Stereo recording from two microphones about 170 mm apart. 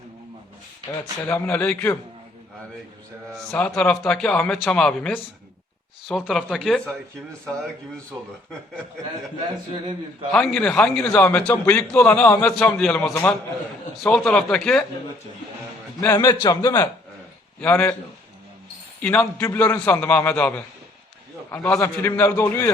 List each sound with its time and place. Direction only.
1.2 s a man's voice: 10° left (ahead or behind)
3.3 s a man's voice: 5° left (ahead or behind)
10.3 s a man's voice: centre (ahead or behind)
16.1 s a man's voice: 25° left (ahead or behind)
19.0 s a man's voice: 5° left (ahead or behind)